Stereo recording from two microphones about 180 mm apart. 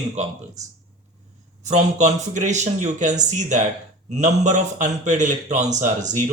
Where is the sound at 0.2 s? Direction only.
40° right (ahead or behind).